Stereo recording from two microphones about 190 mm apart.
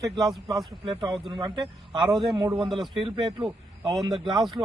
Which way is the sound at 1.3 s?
25° right (ahead or behind).